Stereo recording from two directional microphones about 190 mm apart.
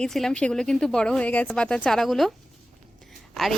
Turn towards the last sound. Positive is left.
turn(degrees=0)  # may be behind; listen again after turning